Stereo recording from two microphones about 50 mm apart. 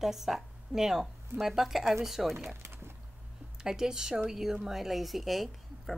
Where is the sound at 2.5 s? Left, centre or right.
Right.